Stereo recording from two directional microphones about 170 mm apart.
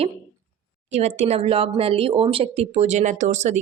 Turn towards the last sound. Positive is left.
turn(degrees=-45)  # may be behind; listen again after turning